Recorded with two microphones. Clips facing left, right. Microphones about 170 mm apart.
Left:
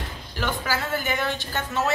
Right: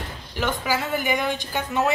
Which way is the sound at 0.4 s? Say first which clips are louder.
Right 2 dB; 15° right (ahead or behind).